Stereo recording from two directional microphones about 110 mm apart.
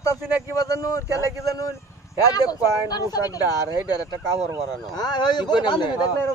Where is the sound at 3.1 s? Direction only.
35° left (ahead or behind).